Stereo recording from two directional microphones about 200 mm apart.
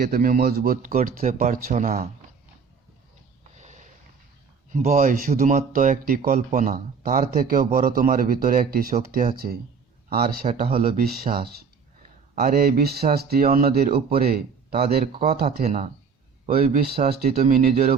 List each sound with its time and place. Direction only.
0.0 s speech: 45° right (ahead or behind)
3.6 s sniff: 35° right (ahead or behind)
4.7 s speech: 40° right (ahead or behind)
15.6 s speech: 30° right (ahead or behind)
16.6 s speech: 45° right (ahead or behind)